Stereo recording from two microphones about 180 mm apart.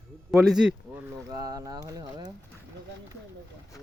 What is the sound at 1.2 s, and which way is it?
Speech, 20° right (ahead or behind).